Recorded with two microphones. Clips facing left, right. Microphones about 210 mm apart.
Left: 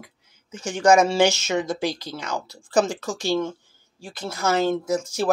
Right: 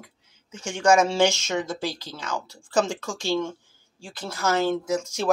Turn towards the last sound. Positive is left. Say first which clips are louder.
# left 2 dB
turn(degrees=10)  # may be behind; listen again after turning